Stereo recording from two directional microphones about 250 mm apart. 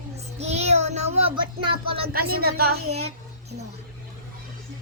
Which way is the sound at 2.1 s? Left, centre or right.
Right.